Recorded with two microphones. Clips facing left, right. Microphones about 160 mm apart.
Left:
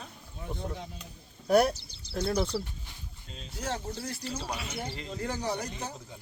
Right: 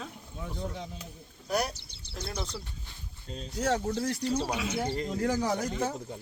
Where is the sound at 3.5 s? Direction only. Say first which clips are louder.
Right 7 dB; 75° right (ahead or behind).